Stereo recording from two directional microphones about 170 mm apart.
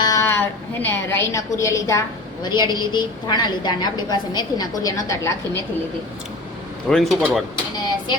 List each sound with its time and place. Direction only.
0.0 s a sound: 20° left (ahead or behind)
2.4 s a woman's voice: 25° left (ahead or behind)
6.8 s speech: centre (ahead or behind)